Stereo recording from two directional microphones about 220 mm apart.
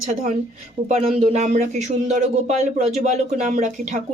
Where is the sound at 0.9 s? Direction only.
30° right (ahead or behind).